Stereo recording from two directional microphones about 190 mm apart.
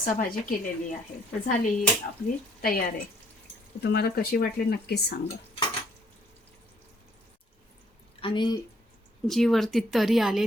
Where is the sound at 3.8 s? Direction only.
55° left (ahead or behind).